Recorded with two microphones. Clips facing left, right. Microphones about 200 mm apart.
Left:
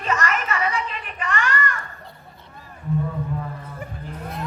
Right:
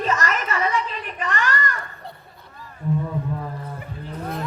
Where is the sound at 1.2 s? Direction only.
35° right (ahead or behind).